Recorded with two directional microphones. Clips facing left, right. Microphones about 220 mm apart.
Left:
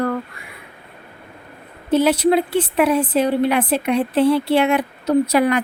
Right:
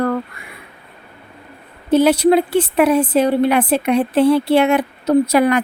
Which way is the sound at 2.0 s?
40° right (ahead or behind).